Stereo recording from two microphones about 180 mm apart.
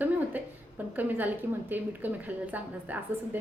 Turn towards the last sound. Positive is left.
turn(degrees=-10)  # may be behind; listen again after turning